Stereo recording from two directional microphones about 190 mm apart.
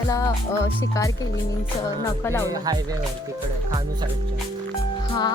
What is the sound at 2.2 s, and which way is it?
Speech, 15° left (ahead or behind).